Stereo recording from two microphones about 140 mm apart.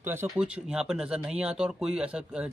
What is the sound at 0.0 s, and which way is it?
Speech, 15° right (ahead or behind).